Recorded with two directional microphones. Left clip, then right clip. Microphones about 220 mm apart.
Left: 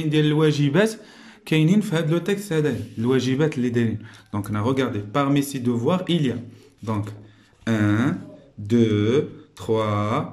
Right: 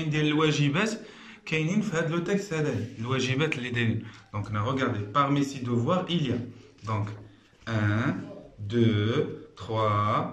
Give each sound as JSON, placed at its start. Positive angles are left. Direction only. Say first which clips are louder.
{"t": 0.1, "sound": "speech", "louder": "left 5 dB", "side_deg": 40}
{"t": 4.3, "sound": "speech", "louder": "left 6 dB", "side_deg": 45}
{"t": 7.6, "sound": "speech", "louder": "left 7 dB", "side_deg": 45}